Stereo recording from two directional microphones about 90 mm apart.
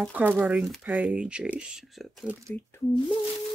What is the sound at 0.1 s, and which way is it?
Speech, 20° right (ahead or behind).